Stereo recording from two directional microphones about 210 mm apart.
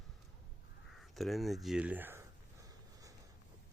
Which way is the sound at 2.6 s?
15° right (ahead or behind).